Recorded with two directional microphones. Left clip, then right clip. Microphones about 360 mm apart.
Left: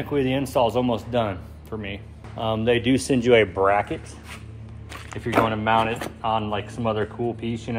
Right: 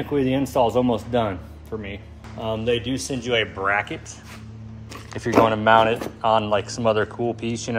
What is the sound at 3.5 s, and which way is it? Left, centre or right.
Speech, centre.